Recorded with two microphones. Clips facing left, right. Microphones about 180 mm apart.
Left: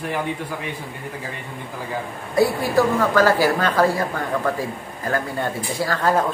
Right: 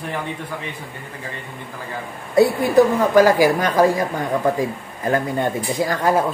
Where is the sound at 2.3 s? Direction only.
20° right (ahead or behind).